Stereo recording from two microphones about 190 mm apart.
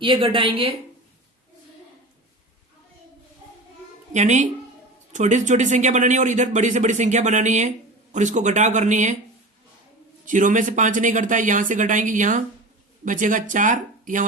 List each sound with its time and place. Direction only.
0.0 s a woman's voice: 25° right (ahead or behind)
4.1 s speech: 40° right (ahead or behind)
10.2 s speech: 40° right (ahead or behind)